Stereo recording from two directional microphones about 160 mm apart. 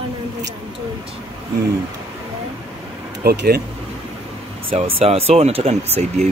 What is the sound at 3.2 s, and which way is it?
Speech, 80° right.